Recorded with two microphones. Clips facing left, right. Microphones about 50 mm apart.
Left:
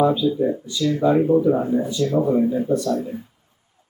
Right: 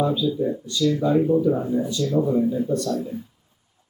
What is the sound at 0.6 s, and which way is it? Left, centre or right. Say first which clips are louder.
Speech: right 1 dB; centre.